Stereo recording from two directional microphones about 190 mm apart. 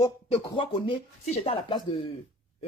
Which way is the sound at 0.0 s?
25° left (ahead or behind).